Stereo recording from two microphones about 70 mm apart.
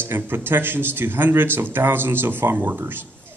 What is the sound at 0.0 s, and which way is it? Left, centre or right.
Speech, right.